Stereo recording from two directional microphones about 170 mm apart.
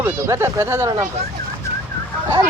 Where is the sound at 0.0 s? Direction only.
15° right (ahead or behind).